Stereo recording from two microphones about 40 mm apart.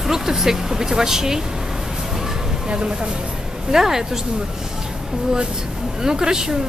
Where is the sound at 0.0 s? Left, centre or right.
Centre.